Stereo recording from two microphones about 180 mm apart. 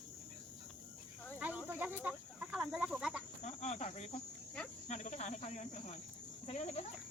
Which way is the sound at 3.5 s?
40° left (ahead or behind).